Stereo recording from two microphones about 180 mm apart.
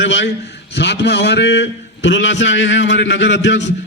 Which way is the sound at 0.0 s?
90° left.